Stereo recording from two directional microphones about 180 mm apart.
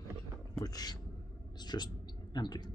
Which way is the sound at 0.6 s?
20° left (ahead or behind).